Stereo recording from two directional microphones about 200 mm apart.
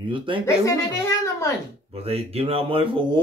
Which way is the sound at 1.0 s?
15° left (ahead or behind).